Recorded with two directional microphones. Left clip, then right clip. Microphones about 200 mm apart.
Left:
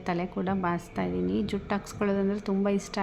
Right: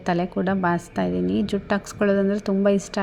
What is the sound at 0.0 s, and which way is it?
A woman's voice, 20° right (ahead or behind).